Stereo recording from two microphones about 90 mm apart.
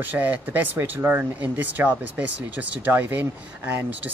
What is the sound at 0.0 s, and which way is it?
Speech, 20° right (ahead or behind).